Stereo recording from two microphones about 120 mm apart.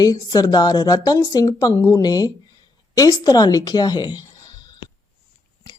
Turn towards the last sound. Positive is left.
turn(degrees=35)  # may be behind; listen again after turning